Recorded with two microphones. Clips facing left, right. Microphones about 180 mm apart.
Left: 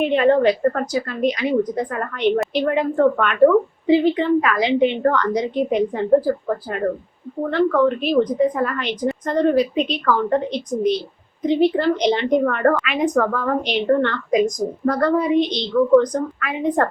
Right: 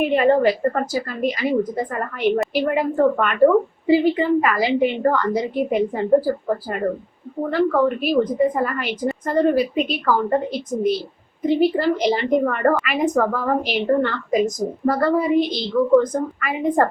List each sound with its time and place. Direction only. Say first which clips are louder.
0.0 s a woman's voice: left 1 dB; 5° right (ahead or behind)